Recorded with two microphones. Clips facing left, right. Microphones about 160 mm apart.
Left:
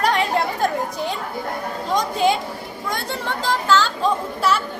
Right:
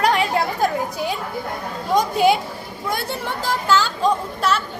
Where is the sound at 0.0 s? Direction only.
5° right (ahead or behind).